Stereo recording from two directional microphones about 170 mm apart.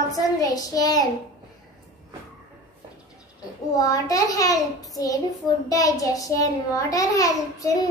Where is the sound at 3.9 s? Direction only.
20° left (ahead or behind).